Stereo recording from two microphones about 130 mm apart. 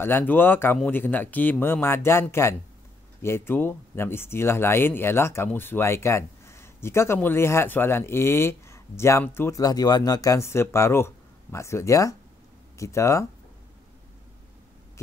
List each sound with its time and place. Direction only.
0.0 s speech: 15° left (ahead or behind)